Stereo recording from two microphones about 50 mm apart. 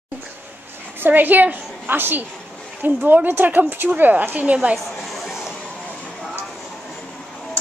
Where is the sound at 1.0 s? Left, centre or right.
Right.